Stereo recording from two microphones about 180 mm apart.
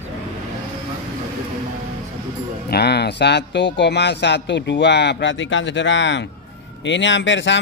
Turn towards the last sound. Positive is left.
turn(degrees=85)